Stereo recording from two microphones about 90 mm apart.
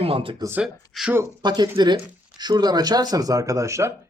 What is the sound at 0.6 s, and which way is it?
Speech, 5° right (ahead or behind).